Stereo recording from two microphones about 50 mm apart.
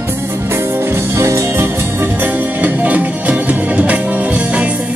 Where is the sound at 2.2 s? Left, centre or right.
Right.